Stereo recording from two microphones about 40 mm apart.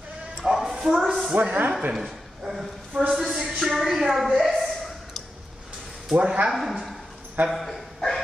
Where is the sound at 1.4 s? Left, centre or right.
Right.